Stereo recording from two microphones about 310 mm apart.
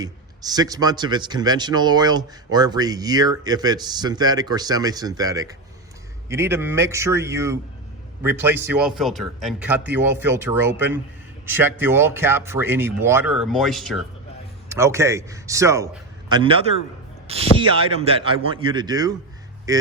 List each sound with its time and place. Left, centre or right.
0.0 s a man's voice: centre